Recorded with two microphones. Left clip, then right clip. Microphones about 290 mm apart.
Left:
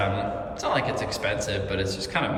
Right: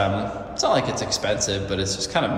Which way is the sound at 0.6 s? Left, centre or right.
Centre.